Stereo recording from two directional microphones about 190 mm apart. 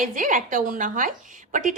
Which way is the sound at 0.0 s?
45° right (ahead or behind).